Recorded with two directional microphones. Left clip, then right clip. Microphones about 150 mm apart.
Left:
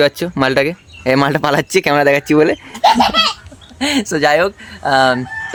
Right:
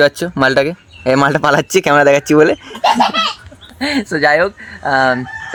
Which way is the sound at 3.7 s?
10° left (ahead or behind).